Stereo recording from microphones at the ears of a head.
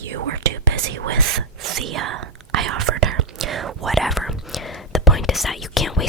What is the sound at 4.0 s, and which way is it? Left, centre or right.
Whispering, centre.